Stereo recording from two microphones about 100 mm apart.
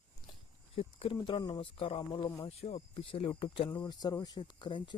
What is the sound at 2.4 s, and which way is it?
Speech, 85° left.